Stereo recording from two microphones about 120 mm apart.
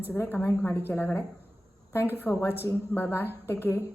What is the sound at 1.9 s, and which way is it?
A woman's voice, 20° left (ahead or behind).